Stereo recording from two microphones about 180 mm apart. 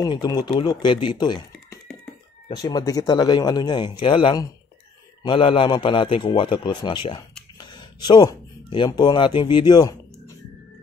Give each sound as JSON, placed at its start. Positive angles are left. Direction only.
{"t": 0.0, "sound": "a man's voice", "side_deg": 25}